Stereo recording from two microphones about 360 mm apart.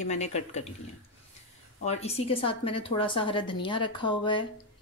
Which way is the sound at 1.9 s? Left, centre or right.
Centre.